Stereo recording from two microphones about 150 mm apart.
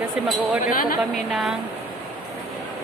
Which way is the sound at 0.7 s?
70° left (ahead or behind).